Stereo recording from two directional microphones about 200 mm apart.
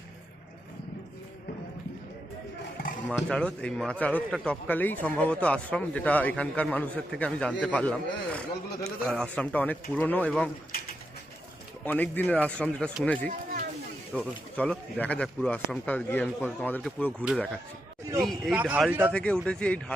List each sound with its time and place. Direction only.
3.1 s speech: 5° left (ahead or behind)
11.9 s speech: 10° left (ahead or behind); by 19.1 s 10° right (ahead or behind)
19.1 s speech: 5° left (ahead or behind)